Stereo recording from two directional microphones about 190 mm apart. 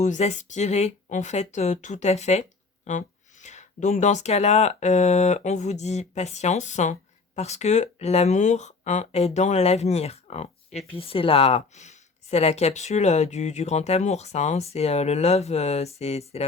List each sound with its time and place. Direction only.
0.0 s speech: 35° left (ahead or behind)